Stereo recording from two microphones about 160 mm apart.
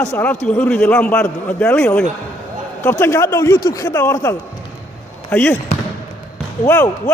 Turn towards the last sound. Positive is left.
turn(degrees=15)  # may be behind; listen again after turning